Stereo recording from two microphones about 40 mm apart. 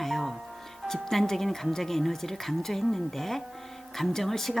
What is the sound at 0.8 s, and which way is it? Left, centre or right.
Music, centre.